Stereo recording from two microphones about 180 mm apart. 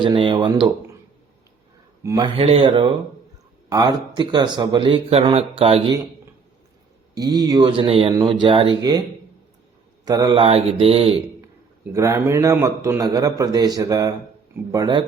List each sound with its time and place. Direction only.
0.0 s speech: 30° right (ahead or behind)
2.0 s speech: 25° right (ahead or behind)
7.2 s speech: 20° right (ahead or behind)
10.1 s speech: 20° right (ahead or behind)
11.9 s a man's voice: 15° right (ahead or behind)